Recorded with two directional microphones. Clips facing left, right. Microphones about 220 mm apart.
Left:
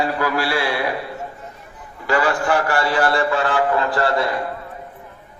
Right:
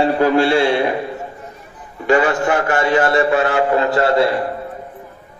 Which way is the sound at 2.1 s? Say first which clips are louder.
Right 4 dB; 25° right (ahead or behind).